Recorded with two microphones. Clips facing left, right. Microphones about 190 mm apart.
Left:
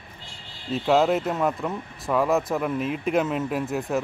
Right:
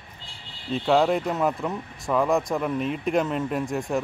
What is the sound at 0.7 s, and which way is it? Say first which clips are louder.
Speech: even; 5° left (ahead or behind).